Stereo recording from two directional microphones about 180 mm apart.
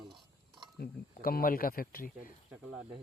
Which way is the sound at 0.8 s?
55° left (ahead or behind).